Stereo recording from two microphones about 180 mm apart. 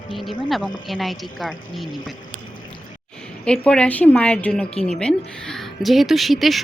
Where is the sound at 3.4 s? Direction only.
5° left (ahead or behind).